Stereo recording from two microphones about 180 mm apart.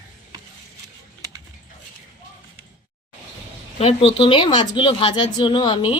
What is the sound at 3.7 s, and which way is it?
A woman's voice, 30° left (ahead or behind).